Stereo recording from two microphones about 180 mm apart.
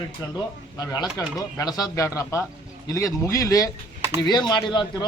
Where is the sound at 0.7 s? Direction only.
20° left (ahead or behind).